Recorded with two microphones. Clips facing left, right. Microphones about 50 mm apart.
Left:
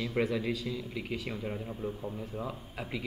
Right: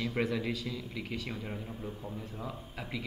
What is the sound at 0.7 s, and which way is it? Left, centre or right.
A man's voice, centre.